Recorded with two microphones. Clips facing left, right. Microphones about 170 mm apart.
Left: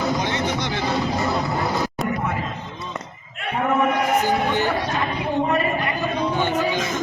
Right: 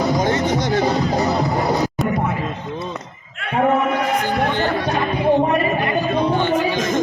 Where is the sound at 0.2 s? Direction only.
45° right (ahead or behind).